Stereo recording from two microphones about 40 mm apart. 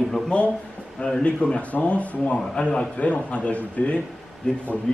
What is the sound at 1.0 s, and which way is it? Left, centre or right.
Speech, left.